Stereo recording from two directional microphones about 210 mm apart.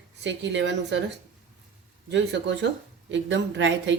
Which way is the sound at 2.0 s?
60° right (ahead or behind).